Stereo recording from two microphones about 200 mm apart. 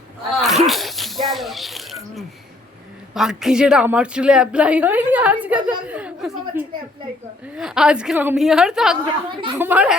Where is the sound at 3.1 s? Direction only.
Centre (ahead or behind).